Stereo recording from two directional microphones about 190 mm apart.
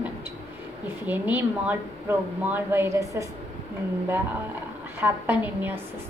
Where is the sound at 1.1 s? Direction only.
10° right (ahead or behind).